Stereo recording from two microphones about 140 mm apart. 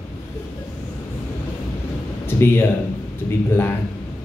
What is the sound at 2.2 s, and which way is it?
Speech, 15° left (ahead or behind).